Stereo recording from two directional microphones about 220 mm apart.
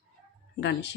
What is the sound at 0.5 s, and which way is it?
Speech, 50° left (ahead or behind).